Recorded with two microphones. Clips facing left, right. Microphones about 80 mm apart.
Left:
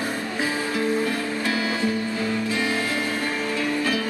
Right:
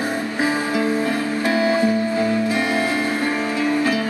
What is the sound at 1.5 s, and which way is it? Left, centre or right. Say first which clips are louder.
Music: right 8 dB; right.